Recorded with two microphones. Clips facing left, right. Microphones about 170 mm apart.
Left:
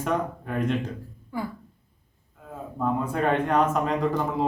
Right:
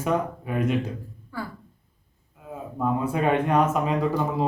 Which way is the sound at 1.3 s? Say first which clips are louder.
Left 3 dB; 20° left (ahead or behind).